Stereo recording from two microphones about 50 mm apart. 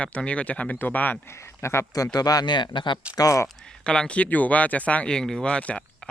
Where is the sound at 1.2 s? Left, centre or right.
Left.